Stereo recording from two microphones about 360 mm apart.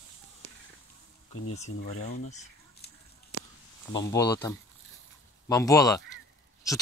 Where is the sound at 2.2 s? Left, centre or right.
Centre.